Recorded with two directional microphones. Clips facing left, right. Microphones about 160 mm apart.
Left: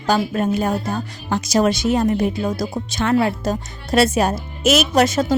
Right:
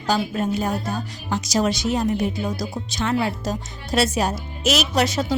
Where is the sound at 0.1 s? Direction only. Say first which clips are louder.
Left 4 dB; 55° left (ahead or behind).